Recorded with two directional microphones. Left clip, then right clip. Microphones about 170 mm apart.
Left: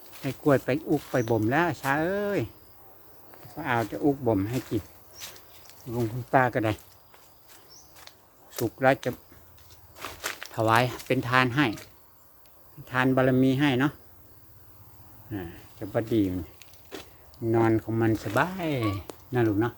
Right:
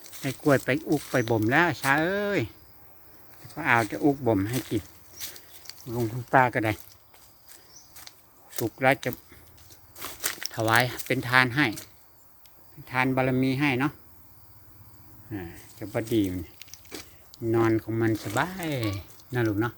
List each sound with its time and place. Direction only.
0.4 s speech: 15° right (ahead or behind)
3.5 s speech: 25° right (ahead or behind)
4.4 s speech: 5° right (ahead or behind)
5.1 s a sound: 85° right
5.9 s speech: 5° right (ahead or behind)
8.1 s a sound: 85° right
8.6 s speech: 5° right (ahead or behind)
9.9 s biting: 80° right
10.5 s speech: centre (ahead or behind)
12.8 s speech: 5° left (ahead or behind)
15.3 s speech: centre (ahead or behind)
16.9 s a sound: 85° right
17.4 s speech: 5° left (ahead or behind)